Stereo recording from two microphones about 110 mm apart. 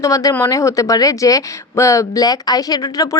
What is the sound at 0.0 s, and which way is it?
Speech, 30° left (ahead or behind).